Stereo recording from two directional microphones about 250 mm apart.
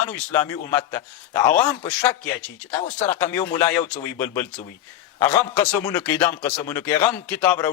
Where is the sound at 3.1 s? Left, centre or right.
Centre.